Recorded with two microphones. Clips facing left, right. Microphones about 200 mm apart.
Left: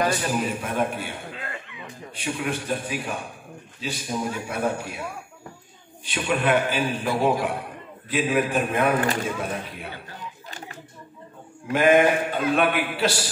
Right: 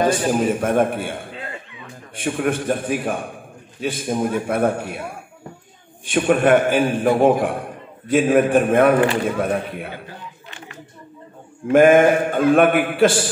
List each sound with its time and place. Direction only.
0.3 s a man's voice: 50° right (ahead or behind)
6.0 s a man's voice: 50° right (ahead or behind)
11.7 s a man's voice: 50° right (ahead or behind)